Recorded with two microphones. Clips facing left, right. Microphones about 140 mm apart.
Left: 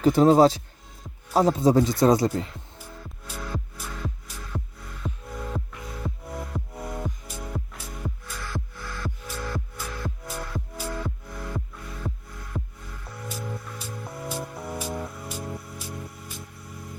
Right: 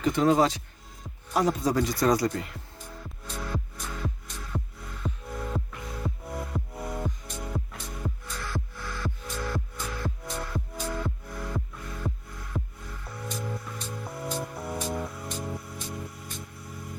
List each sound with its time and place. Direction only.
0.0 s speech: 35° left (ahead or behind)
3.2 s music: 5° left (ahead or behind)